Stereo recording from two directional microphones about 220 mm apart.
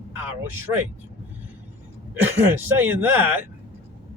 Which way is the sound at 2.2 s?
10° right (ahead or behind).